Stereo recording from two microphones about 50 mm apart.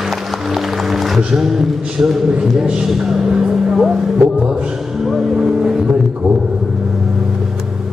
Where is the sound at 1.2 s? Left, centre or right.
Centre.